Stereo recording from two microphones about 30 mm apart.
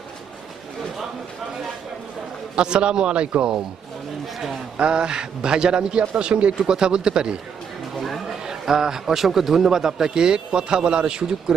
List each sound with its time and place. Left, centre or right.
2.6 s a man's voice: right
4.8 s a man's voice: right
6.6 s a man's voice: right
7.9 s a sound: centre
8.4 s a man's voice: centre